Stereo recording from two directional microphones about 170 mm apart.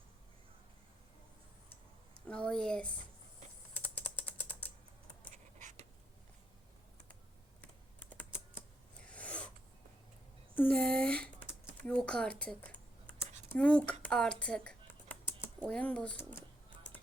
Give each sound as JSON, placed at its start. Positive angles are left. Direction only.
{"t": 2.2, "sound": "speech", "side_deg": 5}
{"t": 3.8, "sound": "typing", "side_deg": 10}
{"t": 5.3, "sound": "a sound", "side_deg": -45}
{"t": 9.0, "sound": "a sound", "side_deg": 5}
{"t": 10.5, "sound": "a sound", "side_deg": 10}
{"t": 11.8, "sound": "computer keyboard", "side_deg": 5}
{"t": 13.5, "sound": "speech", "side_deg": 5}
{"t": 14.0, "sound": "computer keyboard", "side_deg": 5}
{"t": 15.6, "sound": "speech", "side_deg": 10}